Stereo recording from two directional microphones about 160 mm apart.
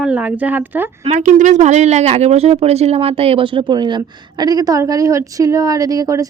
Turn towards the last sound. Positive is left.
turn(degrees=-20)  # may be behind; listen again after turning